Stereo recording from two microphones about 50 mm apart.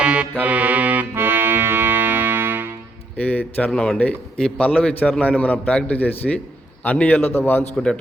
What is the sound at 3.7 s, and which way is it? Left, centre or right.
Speech, centre.